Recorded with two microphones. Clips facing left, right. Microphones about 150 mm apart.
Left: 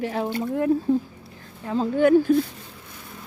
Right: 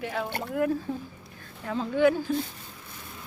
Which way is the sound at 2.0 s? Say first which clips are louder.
Left 6 dB; 50° left (ahead or behind).